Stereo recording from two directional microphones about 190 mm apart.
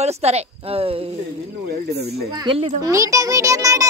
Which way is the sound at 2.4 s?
30° right (ahead or behind).